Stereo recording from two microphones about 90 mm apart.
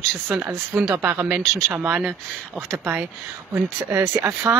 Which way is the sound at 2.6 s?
30° right (ahead or behind).